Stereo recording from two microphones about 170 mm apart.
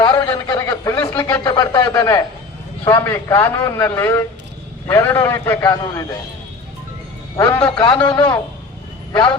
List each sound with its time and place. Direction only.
0.0 s a sound: 25° left (ahead or behind)
2.8 s a man's voice: 15° left (ahead or behind)
7.3 s a man's voice: 20° left (ahead or behind)
8.1 s a man's voice: 10° left (ahead or behind)
9.1 s a man's voice: 25° left (ahead or behind)